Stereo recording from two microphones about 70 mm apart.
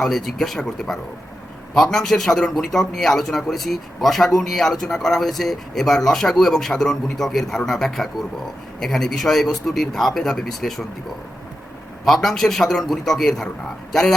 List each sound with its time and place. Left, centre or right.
0.0 s a man's voice: centre
12.0 s a man's voice: centre